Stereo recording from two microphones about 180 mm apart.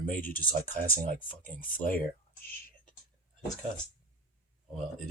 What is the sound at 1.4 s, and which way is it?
Speech, 10° left (ahead or behind).